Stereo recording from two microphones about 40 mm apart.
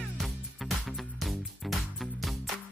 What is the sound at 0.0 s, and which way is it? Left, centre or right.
Music, centre.